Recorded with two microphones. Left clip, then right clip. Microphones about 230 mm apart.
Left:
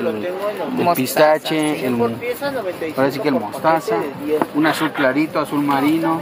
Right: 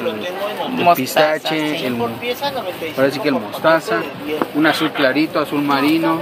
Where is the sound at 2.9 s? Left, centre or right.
Left.